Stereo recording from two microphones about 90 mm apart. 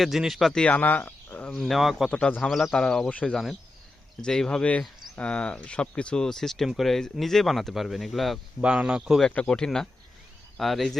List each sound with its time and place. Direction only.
0.0 s speech: 5° right (ahead or behind)
0.6 s speech: 20° left (ahead or behind)
1.5 s speech: 5° left (ahead or behind)
2.0 s speech: 10° left (ahead or behind)
3.3 s speech: centre (ahead or behind)
8.6 s speech: 10° right (ahead or behind)
9.2 s speech: 10° left (ahead or behind)